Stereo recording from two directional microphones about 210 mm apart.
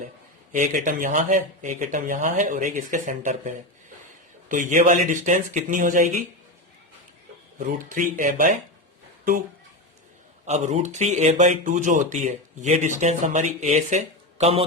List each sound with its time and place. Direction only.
0.5 s speech: 40° right (ahead or behind)
7.6 s speech: 40° right (ahead or behind)
10.4 s speech: 30° right (ahead or behind)